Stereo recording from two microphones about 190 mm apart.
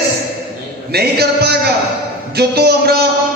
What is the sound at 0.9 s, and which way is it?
A man's voice, 55° right (ahead or behind).